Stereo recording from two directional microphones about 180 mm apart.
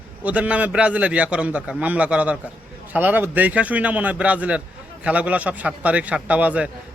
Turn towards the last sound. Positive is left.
turn(degrees=-10)  # may be behind; listen again after turning